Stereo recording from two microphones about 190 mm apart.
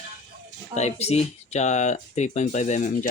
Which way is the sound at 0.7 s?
35° left (ahead or behind).